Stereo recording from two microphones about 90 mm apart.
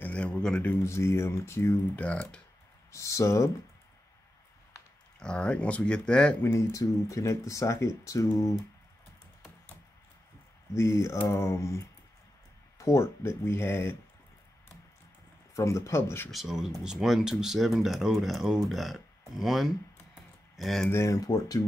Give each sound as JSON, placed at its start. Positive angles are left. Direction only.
{"t": 0.0, "sound": "a sound", "side_deg": 15}
{"t": 0.6, "sound": "speech", "side_deg": 25}
{"t": 2.0, "sound": "speech", "side_deg": 15}
{"t": 2.9, "sound": "speech", "side_deg": 35}
{"t": 5.2, "sound": "speech", "side_deg": 10}
{"t": 6.4, "sound": "speech", "side_deg": 35}
{"t": 10.7, "sound": "speech", "side_deg": 35}
{"t": 15.5, "sound": "speech", "side_deg": 35}
{"t": 16.3, "sound": "speech", "side_deg": -5}
{"t": 20.9, "sound": "speech", "side_deg": 30}
{"t": 21.3, "sound": "speech", "side_deg": 40}